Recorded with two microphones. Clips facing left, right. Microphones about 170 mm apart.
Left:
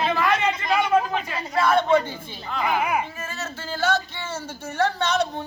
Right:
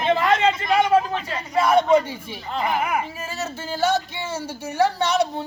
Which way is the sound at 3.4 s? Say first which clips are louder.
Right 3 dB; 10° right (ahead or behind).